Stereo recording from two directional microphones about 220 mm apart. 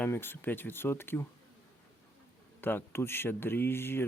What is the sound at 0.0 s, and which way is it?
Speech, 10° left (ahead or behind).